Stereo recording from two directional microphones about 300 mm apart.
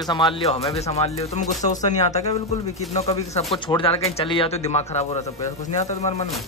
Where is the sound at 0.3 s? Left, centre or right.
Centre.